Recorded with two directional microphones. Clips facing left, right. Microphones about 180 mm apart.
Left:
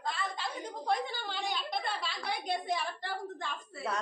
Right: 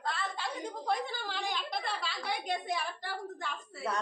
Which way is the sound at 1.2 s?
Centre (ahead or behind).